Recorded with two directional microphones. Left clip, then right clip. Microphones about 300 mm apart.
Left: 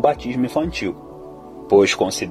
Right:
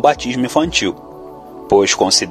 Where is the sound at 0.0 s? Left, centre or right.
Centre.